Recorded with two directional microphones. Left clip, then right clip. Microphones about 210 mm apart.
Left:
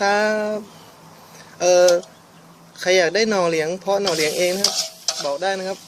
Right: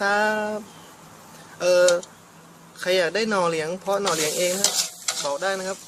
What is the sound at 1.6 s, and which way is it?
Speech, 25° left (ahead or behind).